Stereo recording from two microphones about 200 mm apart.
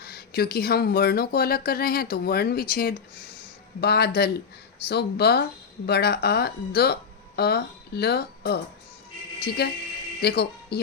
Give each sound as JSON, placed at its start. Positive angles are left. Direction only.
{"t": 0.0, "sound": "speech", "side_deg": 50}